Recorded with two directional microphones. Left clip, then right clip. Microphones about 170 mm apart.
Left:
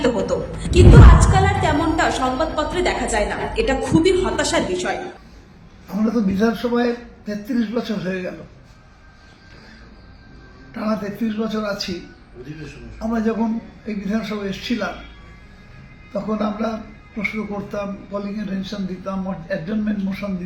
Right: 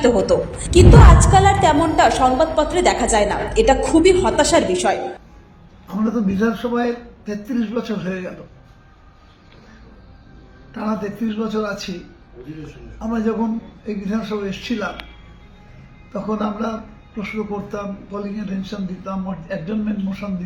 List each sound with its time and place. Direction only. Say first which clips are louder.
0.3 s a woman's voice: right 5 dB; 20° right (ahead or behind)
5.9 s a man's voice: even; 10° right (ahead or behind)
10.8 s a man's voice: even; 5° right (ahead or behind)
13.0 s a man's voice: even; 5° right (ahead or behind)
16.1 s a man's voice: even; 5° right (ahead or behind)